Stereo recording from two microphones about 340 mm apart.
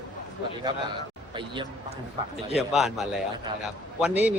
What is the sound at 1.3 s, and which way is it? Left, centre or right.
Speech, centre.